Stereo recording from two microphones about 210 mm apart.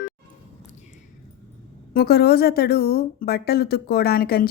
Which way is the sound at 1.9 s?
45° left (ahead or behind).